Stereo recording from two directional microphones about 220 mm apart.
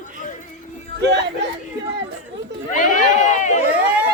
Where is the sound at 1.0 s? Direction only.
50° right (ahead or behind).